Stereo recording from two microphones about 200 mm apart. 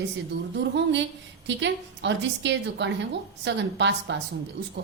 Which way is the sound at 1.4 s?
65° right (ahead or behind).